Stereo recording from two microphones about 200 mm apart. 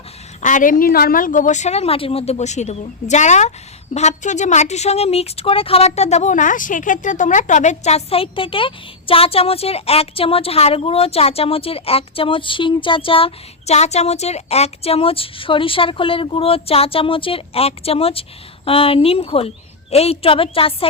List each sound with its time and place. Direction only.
0.4 s a woman's voice: 40° left (ahead or behind)